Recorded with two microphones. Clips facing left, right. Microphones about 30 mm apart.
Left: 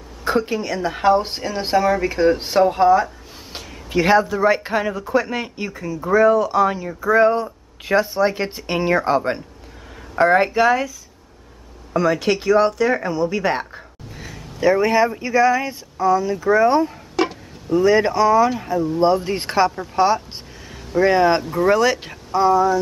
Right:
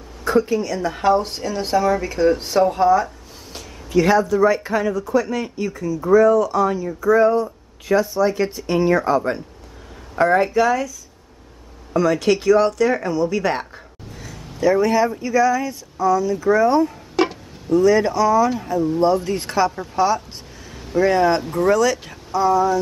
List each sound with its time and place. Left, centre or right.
0.2 s a woman's voice: left
3.5 s speech: left
11.9 s speech: centre
14.2 s speech: left
17.1 s a sound: centre
17.8 s speech: left
21.4 s speech: centre
21.6 s speech: left
22.5 s speech: centre